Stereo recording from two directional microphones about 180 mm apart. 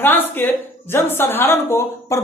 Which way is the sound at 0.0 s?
10° left (ahead or behind).